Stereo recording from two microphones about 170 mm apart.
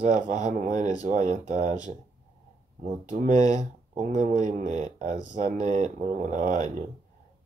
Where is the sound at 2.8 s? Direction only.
50° right (ahead or behind).